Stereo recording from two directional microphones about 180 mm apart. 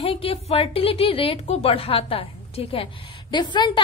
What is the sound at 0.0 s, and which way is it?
A woman's voice, 30° left (ahead or behind).